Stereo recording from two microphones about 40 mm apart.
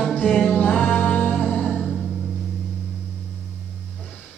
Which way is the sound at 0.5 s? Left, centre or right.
Left.